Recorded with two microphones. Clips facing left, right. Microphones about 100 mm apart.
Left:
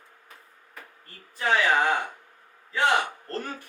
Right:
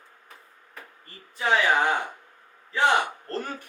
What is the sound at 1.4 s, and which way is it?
Speech, 10° right (ahead or behind).